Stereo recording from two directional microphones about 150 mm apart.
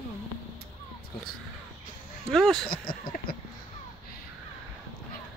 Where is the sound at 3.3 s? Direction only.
75° left (ahead or behind).